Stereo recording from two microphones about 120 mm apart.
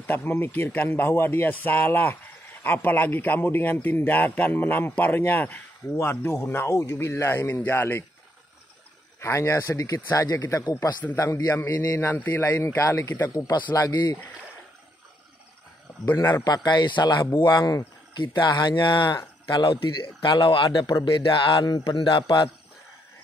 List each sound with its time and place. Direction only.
0.0 s a man's voice: 15° left (ahead or behind)
9.2 s a man's voice: 25° left (ahead or behind)
12.1 s a man's voice: 15° left (ahead or behind)
12.5 s a man's voice: 25° left (ahead or behind)
16.4 s a man's voice: 35° left (ahead or behind)